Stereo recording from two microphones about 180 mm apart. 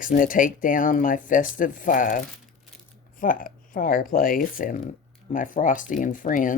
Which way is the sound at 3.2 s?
50° left (ahead or behind).